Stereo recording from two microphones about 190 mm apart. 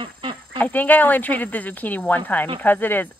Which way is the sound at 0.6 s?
10° left (ahead or behind).